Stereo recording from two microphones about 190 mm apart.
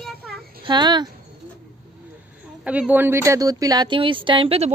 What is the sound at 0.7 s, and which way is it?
Speech, 25° right (ahead or behind).